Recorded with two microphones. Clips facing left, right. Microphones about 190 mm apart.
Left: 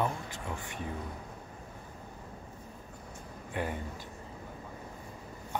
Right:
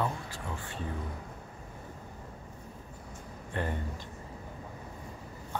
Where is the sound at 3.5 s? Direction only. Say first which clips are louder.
Right 1 dB; 10° left (ahead or behind).